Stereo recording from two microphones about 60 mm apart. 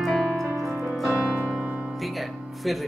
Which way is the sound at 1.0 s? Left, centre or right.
Centre.